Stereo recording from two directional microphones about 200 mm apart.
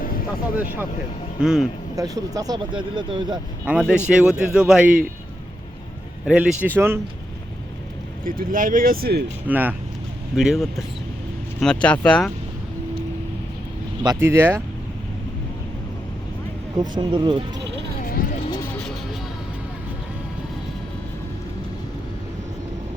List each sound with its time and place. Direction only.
0.0 s vehicle: 45° left (ahead or behind)
1.4 s speech: 5° right (ahead or behind)
2.0 s speech: 15° right (ahead or behind)
3.7 s speech: 5° right (ahead or behind)
6.2 s speech: 5° right (ahead or behind)
8.2 s speech: 45° right (ahead or behind)
9.5 s speech: 10° right (ahead or behind)
14.0 s speech: 15° right (ahead or behind)
16.7 s speech: 20° right (ahead or behind)